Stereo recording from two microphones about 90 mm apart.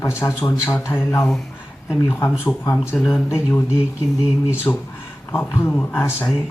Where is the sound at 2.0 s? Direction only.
30° left (ahead or behind).